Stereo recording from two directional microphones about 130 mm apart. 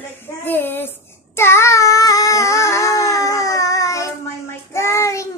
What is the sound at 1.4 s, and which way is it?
Child singing, 20° left (ahead or behind).